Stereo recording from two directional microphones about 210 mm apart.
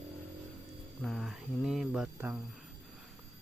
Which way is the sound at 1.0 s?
Centre (ahead or behind).